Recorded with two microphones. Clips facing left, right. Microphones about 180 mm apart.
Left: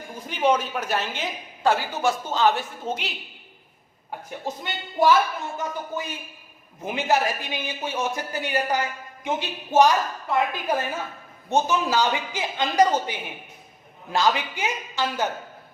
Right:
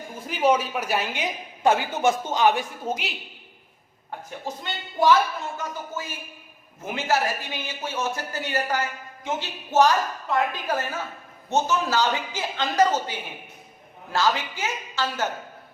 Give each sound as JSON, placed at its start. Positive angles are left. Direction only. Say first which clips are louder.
{"t": 0.3, "sound": "a woman's voice", "louder": "right 1 dB", "side_deg": -5}
{"t": 4.3, "sound": "speech", "louder": "left 2 dB", "side_deg": 10}